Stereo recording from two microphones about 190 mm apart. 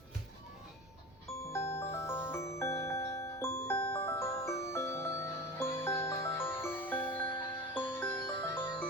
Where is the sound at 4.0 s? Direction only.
30° left (ahead or behind).